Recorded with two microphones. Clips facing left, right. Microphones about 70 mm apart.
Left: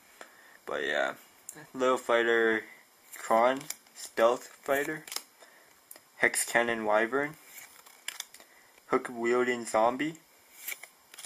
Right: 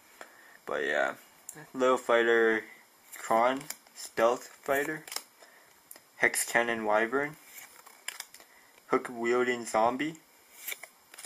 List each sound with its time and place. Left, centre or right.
0.2 s speech: centre
6.1 s speech: centre
8.8 s speech: centre
10.7 s a sound: centre